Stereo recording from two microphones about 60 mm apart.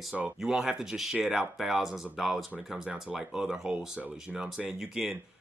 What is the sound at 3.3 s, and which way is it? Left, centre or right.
Speech, centre.